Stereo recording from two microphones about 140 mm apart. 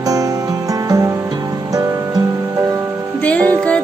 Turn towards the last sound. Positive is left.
turn(degrees=10)  # may be behind; listen again after turning